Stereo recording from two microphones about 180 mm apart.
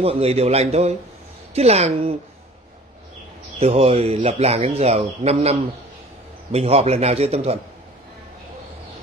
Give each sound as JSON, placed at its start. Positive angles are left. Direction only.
{"t": 0.0, "sound": "speech", "side_deg": -35}
{"t": 3.5, "sound": "speech", "side_deg": -35}